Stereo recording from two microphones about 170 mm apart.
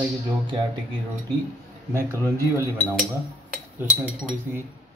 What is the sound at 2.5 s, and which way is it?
Speech, 15° right (ahead or behind).